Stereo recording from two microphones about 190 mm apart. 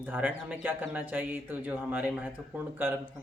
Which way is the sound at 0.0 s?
10° right (ahead or behind).